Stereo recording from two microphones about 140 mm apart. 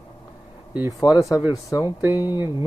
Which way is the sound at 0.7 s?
15° right (ahead or behind).